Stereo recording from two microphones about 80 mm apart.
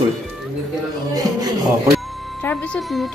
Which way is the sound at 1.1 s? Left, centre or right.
Right.